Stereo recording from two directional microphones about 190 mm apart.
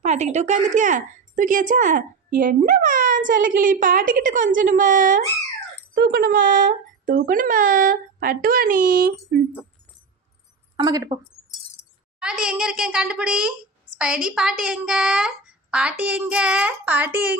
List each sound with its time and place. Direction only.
0.0 s a woman's voice: 40° right (ahead or behind)
5.9 s a woman's voice: 60° right (ahead or behind)
10.8 s a woman's voice: 20° right (ahead or behind)
12.2 s a woman's voice: 5° right (ahead or behind)